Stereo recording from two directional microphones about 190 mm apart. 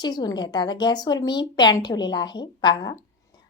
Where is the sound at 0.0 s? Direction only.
20° left (ahead or behind).